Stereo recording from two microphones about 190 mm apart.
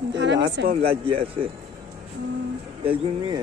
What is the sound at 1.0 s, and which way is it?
Speech, 30° right (ahead or behind).